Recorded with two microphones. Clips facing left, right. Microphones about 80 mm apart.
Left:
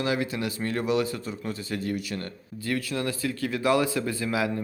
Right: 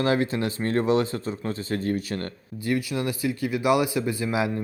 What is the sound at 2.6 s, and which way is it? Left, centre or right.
Speech, centre.